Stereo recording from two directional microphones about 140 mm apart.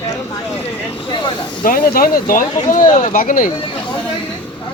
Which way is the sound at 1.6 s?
90° left.